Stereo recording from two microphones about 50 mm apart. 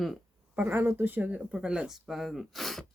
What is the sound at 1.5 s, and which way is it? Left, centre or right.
Speech, centre.